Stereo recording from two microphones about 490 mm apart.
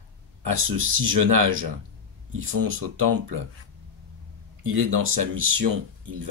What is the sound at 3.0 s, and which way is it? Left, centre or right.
Speech, right.